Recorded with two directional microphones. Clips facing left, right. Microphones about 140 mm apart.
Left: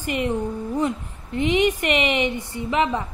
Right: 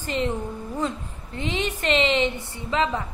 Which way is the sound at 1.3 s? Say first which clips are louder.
Left 8 dB; 15° left (ahead or behind).